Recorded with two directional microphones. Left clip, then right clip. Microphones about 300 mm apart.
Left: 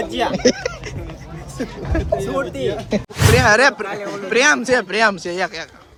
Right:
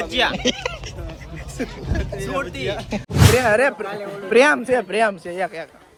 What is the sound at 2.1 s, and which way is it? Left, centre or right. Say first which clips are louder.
Speech: left 4 dB; centre.